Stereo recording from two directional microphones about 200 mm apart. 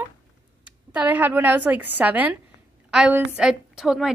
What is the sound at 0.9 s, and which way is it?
A woman's voice, 10° right (ahead or behind).